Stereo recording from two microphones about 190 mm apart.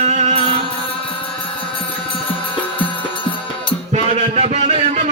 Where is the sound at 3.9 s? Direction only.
35° right (ahead or behind).